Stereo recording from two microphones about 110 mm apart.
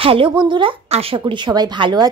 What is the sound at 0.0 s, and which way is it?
Speech, 55° right (ahead or behind).